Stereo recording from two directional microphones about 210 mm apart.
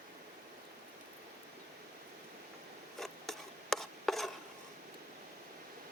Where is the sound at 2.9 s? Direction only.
Centre (ahead or behind).